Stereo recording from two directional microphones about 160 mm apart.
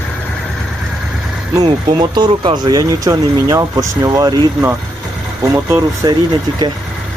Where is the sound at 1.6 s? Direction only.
30° right (ahead or behind).